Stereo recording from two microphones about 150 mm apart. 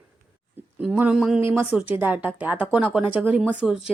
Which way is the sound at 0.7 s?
10° right (ahead or behind).